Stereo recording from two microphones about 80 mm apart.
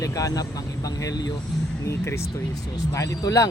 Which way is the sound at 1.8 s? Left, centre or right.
Left.